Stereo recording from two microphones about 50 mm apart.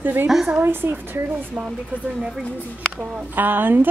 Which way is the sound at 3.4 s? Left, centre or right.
Right.